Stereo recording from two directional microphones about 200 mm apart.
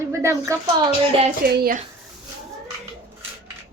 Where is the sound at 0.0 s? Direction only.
15° right (ahead or behind).